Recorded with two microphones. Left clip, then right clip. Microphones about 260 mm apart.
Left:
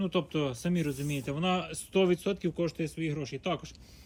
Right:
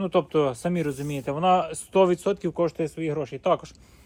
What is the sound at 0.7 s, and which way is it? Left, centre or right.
Speech, centre.